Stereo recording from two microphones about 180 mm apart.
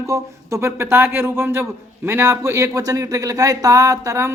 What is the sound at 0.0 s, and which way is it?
A woman's voice, 15° right (ahead or behind).